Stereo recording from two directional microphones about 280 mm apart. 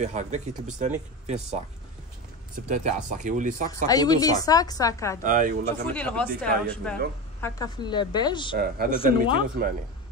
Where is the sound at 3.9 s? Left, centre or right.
Centre.